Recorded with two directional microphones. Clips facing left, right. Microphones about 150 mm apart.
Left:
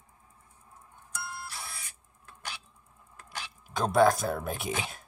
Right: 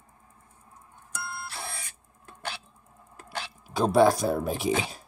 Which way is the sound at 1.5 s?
60° right (ahead or behind).